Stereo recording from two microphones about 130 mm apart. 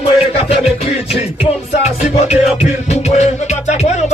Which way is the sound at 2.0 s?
60° left (ahead or behind).